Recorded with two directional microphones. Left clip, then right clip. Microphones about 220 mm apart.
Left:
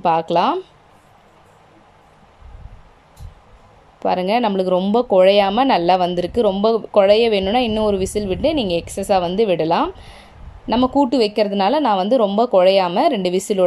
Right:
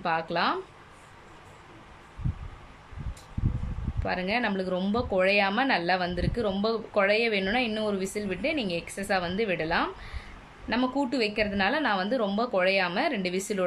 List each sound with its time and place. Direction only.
0.0 s speech: 30° left (ahead or behind)
4.0 s speech: 30° left (ahead or behind)